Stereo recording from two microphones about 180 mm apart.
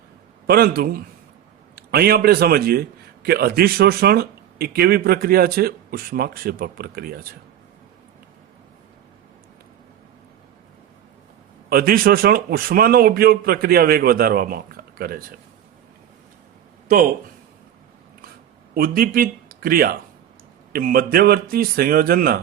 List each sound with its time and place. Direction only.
0.4 s a man's voice: 60° right (ahead or behind)
11.7 s a man's voice: 55° right (ahead or behind)
18.7 s a man's voice: 55° right (ahead or behind)